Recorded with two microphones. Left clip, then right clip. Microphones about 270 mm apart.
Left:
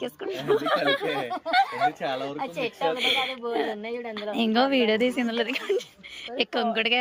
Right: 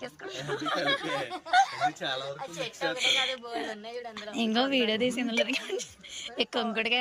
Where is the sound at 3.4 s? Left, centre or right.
Left.